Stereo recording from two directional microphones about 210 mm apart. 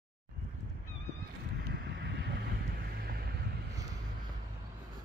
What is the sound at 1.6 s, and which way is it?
Vehicle, 50° right (ahead or behind).